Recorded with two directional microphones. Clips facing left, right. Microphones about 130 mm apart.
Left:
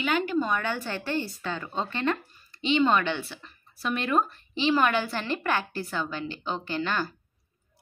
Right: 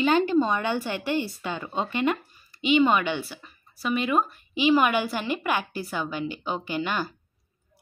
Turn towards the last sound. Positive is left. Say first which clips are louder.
# right 1 dB
turn(degrees=-15)  # may be behind; listen again after turning